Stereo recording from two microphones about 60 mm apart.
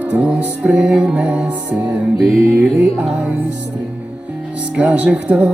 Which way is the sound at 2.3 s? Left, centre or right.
Right.